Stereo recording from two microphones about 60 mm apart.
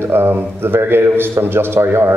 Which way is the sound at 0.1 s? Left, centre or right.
Right.